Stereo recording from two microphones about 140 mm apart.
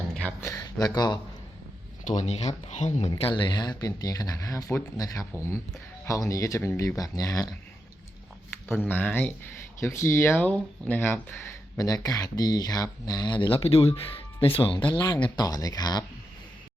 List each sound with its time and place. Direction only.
0.1 s a sound: 10° left (ahead or behind)
0.4 s a sound: 25° left (ahead or behind)
0.9 s speech: 30° left (ahead or behind)
2.0 s speech: 55° left (ahead or behind)
3.1 s speech: 35° left (ahead or behind)
8.7 s speech: 15° left (ahead or behind)
11.8 s speech: 25° left (ahead or behind)